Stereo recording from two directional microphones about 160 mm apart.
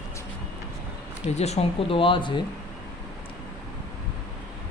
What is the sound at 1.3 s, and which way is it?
Speech, 45° left (ahead or behind).